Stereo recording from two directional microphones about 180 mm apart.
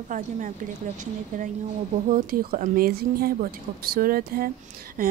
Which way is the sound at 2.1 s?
50° right (ahead or behind).